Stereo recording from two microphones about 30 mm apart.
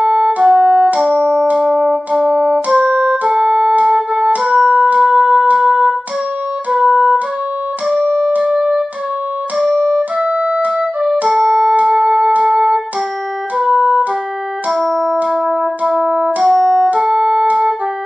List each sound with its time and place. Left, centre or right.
0.0 s music: right
1.4 s music: right
1.8 s music: right
4.6 s music: right
6.7 s music: right
7.9 s music: centre
8.4 s music: right
9.9 s music: right
11.3 s music: right
14.9 s music: centre
15.4 s music: right
17.5 s music: right